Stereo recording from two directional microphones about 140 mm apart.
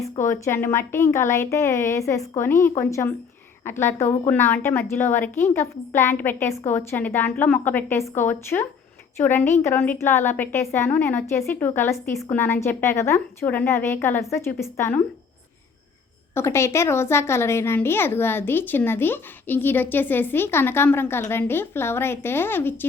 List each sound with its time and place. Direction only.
0.3 s a woman's voice: 20° left (ahead or behind)
16.3 s a woman's voice: 20° left (ahead or behind)